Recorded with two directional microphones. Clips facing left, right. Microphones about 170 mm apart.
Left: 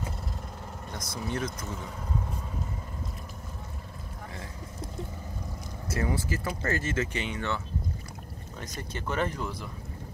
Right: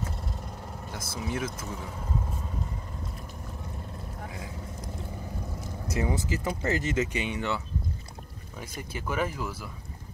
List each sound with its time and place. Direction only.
0.9 s speech: 5° right (ahead or behind)
5.9 s speech: 15° right (ahead or behind)